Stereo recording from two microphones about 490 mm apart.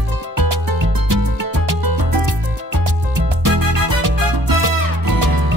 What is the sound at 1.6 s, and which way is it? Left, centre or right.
Music, right.